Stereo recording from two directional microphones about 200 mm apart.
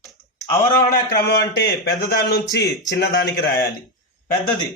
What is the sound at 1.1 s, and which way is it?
Speech, 55° left (ahead or behind).